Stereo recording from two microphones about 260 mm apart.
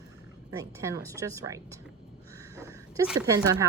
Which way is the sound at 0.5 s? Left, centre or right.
Centre.